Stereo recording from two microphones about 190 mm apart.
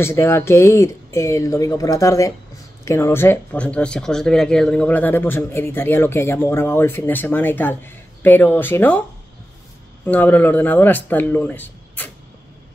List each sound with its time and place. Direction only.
0.0 s speech: 15° left (ahead or behind)
10.0 s speech: 10° left (ahead or behind)